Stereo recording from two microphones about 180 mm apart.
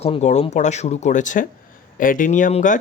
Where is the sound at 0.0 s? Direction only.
35° left (ahead or behind).